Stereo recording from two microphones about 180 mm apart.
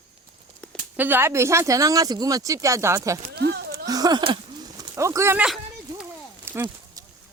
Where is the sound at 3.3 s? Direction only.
65° right (ahead or behind).